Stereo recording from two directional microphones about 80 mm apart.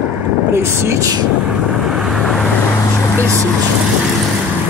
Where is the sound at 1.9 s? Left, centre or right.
Centre.